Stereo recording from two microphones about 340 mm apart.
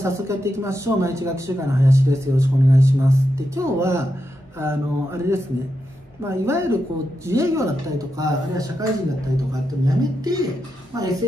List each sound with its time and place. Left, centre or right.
0.0 s speech: centre